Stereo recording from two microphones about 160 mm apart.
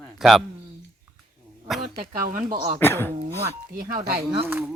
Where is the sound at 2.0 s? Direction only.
60° right (ahead or behind).